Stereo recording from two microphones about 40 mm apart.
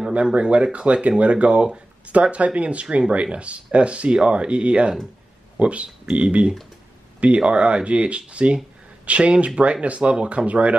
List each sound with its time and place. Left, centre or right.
0.1 s speech: right